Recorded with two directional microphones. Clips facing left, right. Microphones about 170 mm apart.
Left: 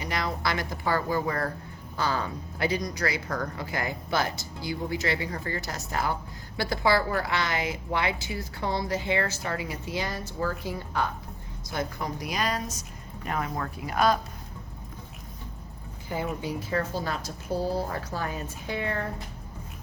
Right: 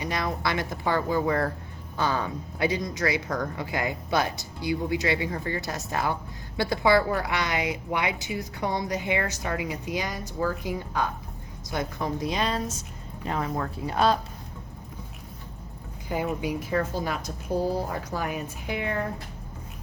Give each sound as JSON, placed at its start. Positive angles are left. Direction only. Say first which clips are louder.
{"t": 0.0, "sound": "a woman's voice", "louder": "right 1 dB", "side_deg": -20}
{"t": 16.4, "sound": "a woman's voice", "louder": "right 2 dB", "side_deg": -15}